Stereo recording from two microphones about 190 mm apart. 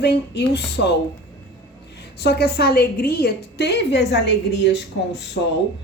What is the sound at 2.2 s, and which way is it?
A woman's voice, 60° left (ahead or behind).